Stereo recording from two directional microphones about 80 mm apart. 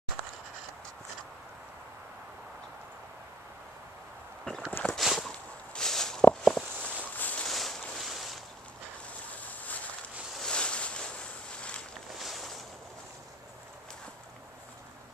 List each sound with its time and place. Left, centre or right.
4.5 s walk: centre
7.2 s boat: centre
7.4 s boat: centre
9.4 s vehicle: centre
10.3 s boat: centre
12.2 s boat: centre